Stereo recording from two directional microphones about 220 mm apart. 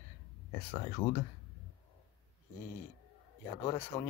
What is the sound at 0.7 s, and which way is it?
Speech, 20° left (ahead or behind).